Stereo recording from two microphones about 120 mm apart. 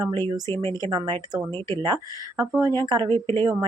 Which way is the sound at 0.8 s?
35° right (ahead or behind).